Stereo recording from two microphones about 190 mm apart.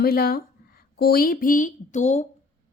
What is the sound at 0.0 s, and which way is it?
A woman's voice, 55° left (ahead or behind).